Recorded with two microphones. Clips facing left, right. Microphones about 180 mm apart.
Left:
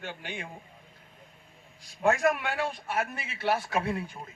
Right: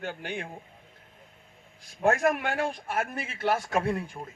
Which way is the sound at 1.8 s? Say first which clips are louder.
Right 1 dB; 55° right (ahead or behind).